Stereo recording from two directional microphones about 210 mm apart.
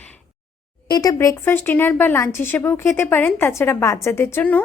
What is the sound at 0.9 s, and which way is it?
A woman's voice, 15° left (ahead or behind).